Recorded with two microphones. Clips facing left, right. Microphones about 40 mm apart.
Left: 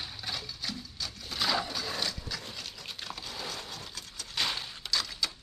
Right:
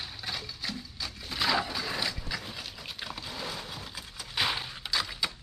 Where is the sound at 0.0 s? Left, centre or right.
Centre.